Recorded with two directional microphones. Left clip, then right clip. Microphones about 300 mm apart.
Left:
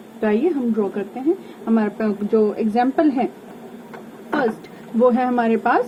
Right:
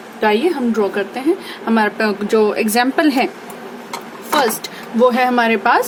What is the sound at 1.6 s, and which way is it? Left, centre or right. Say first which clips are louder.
Speech: right 6 dB; right.